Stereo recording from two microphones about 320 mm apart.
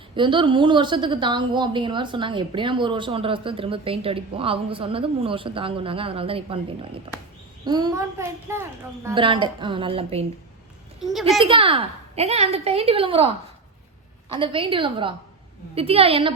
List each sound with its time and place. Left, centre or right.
0.2 s a woman's voice: centre
11.0 s a child's voice: centre
11.4 s a woman's voice: centre
14.3 s a woman's voice: centre